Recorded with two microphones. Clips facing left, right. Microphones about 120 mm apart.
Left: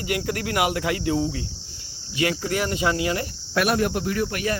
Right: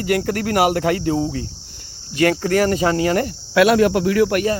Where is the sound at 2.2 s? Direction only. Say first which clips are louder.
Right 8 dB; 50° right (ahead or behind).